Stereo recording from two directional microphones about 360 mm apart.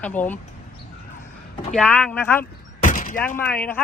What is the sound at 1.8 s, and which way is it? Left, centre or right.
Speech, centre.